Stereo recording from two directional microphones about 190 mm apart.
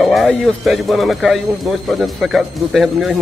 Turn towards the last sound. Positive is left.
turn(degrees=0)  # may be behind; listen again after turning